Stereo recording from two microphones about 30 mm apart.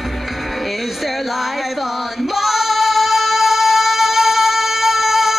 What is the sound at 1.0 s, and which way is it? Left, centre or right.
Female singing, centre.